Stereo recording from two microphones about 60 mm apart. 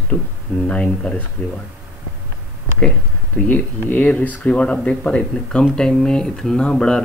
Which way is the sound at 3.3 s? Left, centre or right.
Left.